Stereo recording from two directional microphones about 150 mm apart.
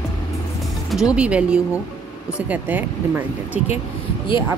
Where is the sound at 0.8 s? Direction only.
5° right (ahead or behind).